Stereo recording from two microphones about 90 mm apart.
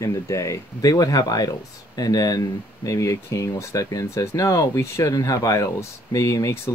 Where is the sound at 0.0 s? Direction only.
35° left (ahead or behind).